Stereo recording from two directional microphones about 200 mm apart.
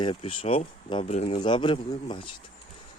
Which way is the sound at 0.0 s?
25° left (ahead or behind).